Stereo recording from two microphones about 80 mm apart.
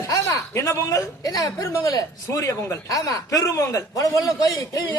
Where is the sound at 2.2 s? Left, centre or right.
Left.